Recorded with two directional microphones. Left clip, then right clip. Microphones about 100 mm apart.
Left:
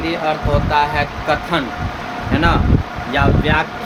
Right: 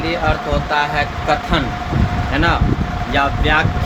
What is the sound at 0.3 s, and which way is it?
Speech, 25° left (ahead or behind).